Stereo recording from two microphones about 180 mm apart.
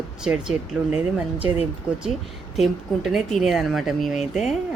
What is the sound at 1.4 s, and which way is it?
Speech, 35° left (ahead or behind).